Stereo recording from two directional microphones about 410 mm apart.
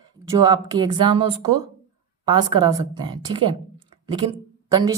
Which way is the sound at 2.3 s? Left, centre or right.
Centre.